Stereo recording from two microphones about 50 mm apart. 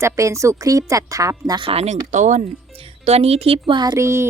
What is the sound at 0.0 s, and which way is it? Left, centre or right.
A woman's voice, right.